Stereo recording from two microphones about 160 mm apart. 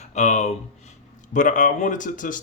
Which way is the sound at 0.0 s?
45° left (ahead or behind).